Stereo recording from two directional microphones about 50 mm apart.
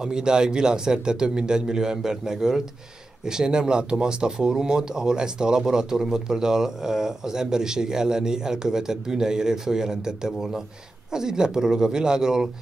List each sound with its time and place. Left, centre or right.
0.0 s speech: centre